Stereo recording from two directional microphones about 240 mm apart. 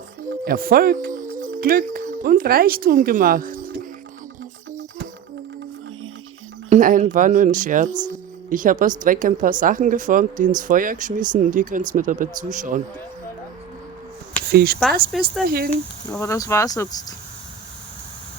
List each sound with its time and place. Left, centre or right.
0.4 s speech: right
6.7 s speech: right
14.5 s speech: right
15.1 s speech: centre
15.4 s speech: right
16.1 s speech: centre